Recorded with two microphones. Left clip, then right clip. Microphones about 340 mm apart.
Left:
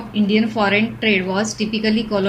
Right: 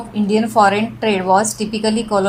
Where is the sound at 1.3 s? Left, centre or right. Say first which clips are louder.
Right 7 dB; centre.